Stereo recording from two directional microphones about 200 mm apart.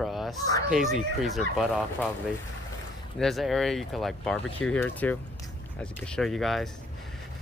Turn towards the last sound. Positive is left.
turn(degrees=0)  # may be behind; listen again after turning